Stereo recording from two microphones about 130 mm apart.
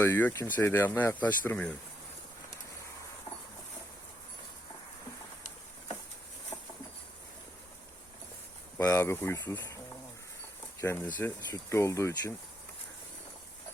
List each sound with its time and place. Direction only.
0.0 s speech: 15° left (ahead or behind)
3.3 s a sound: 45° left (ahead or behind)
6.5 s patter: 25° left (ahead or behind)
8.9 s speech: 20° left (ahead or behind)